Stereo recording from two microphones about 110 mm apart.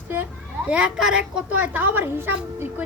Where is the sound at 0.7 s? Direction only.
10° right (ahead or behind).